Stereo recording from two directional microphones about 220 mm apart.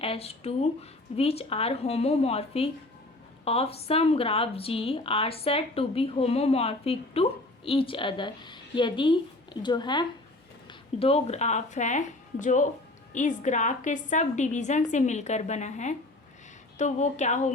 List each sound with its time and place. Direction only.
0.0 s a woman's voice: 25° left (ahead or behind)